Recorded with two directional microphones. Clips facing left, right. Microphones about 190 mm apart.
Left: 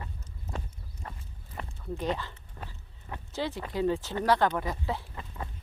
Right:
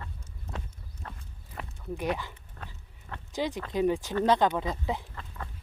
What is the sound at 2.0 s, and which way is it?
Speech, 10° right (ahead or behind).